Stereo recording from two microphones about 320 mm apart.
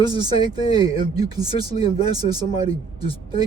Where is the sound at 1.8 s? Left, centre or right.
Centre.